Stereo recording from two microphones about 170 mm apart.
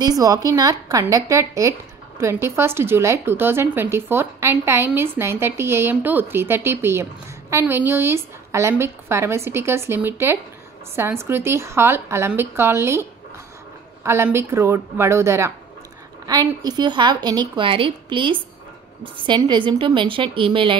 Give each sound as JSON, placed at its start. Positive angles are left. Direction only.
{"t": 0.0, "sound": "a woman's voice", "side_deg": -20}
{"t": 14.0, "sound": "a woman's voice", "side_deg": -15}